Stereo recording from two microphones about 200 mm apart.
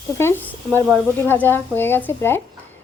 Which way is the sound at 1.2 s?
10° left (ahead or behind).